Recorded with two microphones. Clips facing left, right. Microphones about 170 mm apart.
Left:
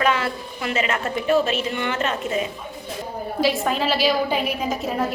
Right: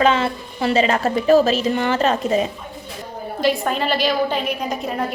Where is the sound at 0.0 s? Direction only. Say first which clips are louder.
Right 4 dB; 25° right (ahead or behind).